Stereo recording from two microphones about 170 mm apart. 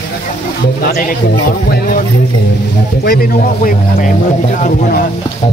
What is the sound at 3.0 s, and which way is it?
Speech, 60° left (ahead or behind).